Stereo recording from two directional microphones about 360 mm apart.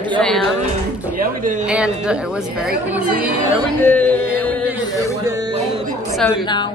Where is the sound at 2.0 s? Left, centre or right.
Centre.